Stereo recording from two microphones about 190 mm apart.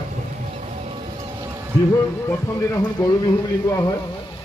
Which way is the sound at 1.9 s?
20° left (ahead or behind).